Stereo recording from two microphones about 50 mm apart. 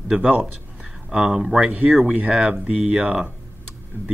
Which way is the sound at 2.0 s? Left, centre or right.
Right.